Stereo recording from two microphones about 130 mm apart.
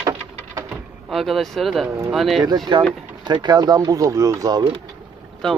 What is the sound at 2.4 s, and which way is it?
Speech, 35° right (ahead or behind).